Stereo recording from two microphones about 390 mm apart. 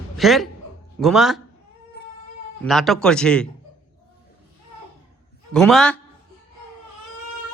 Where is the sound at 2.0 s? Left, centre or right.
Left.